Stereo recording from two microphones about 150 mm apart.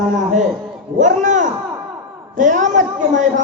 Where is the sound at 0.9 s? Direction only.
55° right (ahead or behind).